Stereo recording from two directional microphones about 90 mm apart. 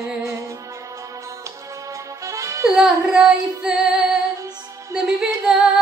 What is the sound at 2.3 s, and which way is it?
Music, 35° right (ahead or behind).